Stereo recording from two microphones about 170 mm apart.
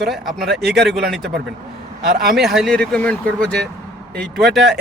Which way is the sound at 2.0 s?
60° right (ahead or behind).